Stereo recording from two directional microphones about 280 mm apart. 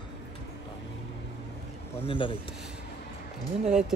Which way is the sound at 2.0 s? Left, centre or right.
Centre.